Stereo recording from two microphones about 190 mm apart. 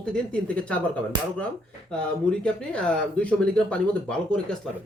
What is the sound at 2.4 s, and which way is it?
Speech, 5° left (ahead or behind).